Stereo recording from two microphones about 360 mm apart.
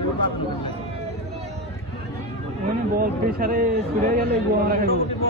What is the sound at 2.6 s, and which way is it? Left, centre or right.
A man's voice, right.